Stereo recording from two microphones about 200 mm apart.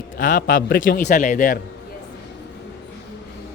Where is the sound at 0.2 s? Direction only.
40° left (ahead or behind).